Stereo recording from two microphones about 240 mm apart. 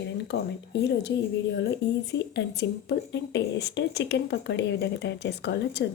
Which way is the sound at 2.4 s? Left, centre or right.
Left.